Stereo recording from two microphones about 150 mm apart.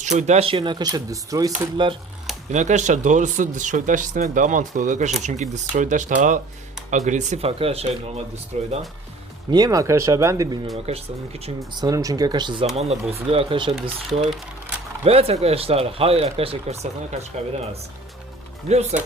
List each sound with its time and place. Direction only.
0.0 s speech: 50° right (ahead or behind); by 2.0 s 30° right (ahead or behind)
2.5 s speech: 50° right (ahead or behind)
9.5 s speech: 25° right (ahead or behind)
10.8 s speech: 45° right (ahead or behind)
11.8 s speech: 25° right (ahead or behind)
12.7 s speech: 45° right (ahead or behind)
15.0 s speech: 40° right (ahead or behind)
18.7 s speech: 45° right (ahead or behind)